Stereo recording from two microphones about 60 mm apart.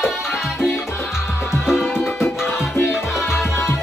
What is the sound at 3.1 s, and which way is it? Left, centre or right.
Music, centre.